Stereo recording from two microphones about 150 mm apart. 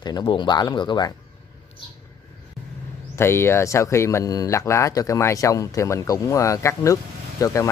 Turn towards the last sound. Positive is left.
turn(degrees=20)  # may be behind; listen again after turning